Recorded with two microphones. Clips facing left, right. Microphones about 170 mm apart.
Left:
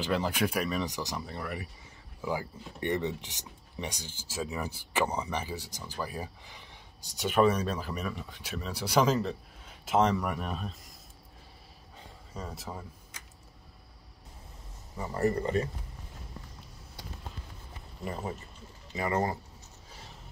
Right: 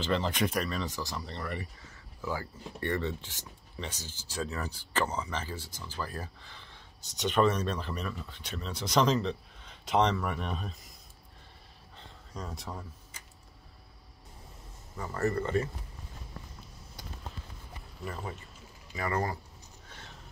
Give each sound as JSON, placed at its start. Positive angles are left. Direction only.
{"t": 0.0, "sound": "speech", "side_deg": 10}
{"t": 12.0, "sound": "a sound", "side_deg": 0}
{"t": 15.0, "sound": "speech", "side_deg": 15}
{"t": 18.0, "sound": "speech", "side_deg": 25}